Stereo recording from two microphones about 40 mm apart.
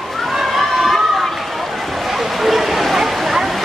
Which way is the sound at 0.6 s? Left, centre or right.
Centre.